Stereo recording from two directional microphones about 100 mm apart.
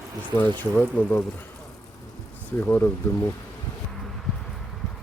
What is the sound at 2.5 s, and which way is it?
Speech, 25° left (ahead or behind).